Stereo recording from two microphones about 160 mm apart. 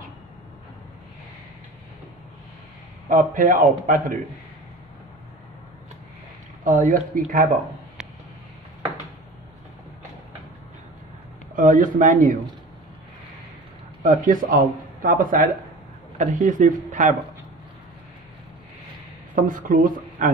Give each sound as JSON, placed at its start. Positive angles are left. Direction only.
{"t": 3.1, "sound": "speech", "side_deg": -55}
{"t": 6.6, "sound": "speech", "side_deg": -55}
{"t": 11.5, "sound": "speech", "side_deg": -55}
{"t": 14.0, "sound": "speech", "side_deg": -55}
{"t": 19.3, "sound": "speech", "side_deg": -55}